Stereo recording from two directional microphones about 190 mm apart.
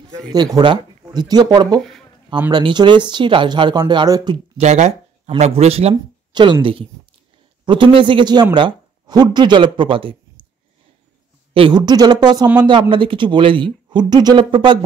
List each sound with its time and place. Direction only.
0.3 s speech: 20° right (ahead or behind)
1.8 s speech: centre (ahead or behind)
2.5 s speech: 25° right (ahead or behind)
4.6 s speech: 35° right (ahead or behind)
11.5 s speech: 25° right (ahead or behind)